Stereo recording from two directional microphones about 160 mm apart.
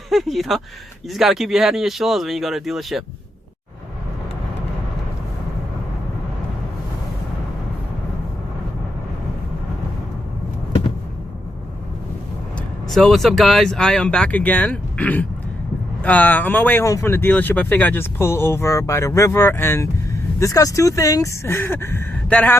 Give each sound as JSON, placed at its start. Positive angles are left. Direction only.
{"t": 0.1, "sound": "speech", "side_deg": 0}
{"t": 12.9, "sound": "speech", "side_deg": 0}